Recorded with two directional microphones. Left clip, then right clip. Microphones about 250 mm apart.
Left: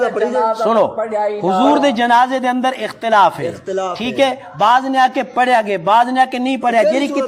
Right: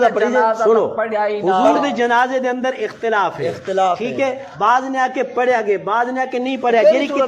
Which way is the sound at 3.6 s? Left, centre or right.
Left.